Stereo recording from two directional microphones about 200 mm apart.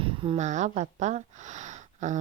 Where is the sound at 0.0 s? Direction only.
25° right (ahead or behind).